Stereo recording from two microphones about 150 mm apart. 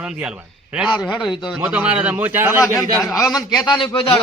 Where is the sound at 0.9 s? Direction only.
30° left (ahead or behind).